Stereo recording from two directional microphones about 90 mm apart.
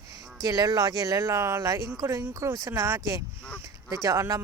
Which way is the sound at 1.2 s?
30° right (ahead or behind).